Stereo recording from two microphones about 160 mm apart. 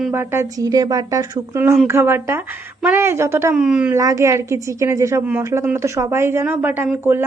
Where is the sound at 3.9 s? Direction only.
20° right (ahead or behind).